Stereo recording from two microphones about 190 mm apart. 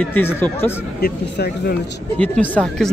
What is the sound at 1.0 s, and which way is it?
Speech, 55° left (ahead or behind).